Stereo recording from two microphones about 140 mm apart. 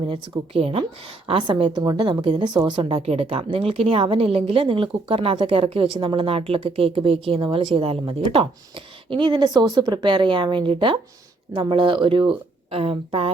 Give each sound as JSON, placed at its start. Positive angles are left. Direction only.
{"t": 0.1, "sound": "a woman's voice", "side_deg": -45}
{"t": 3.1, "sound": "a woman's voice", "side_deg": -45}